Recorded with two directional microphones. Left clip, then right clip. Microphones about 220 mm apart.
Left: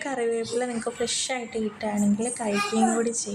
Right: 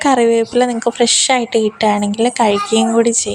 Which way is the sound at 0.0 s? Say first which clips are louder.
Right 15 dB; 40° right (ahead or behind).